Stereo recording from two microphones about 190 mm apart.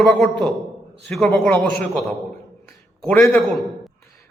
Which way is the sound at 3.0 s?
5° left (ahead or behind).